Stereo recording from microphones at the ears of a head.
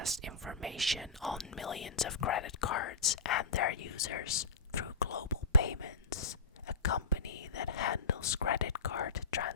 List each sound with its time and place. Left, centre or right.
0.9 s speech: centre
1.6 s speech: left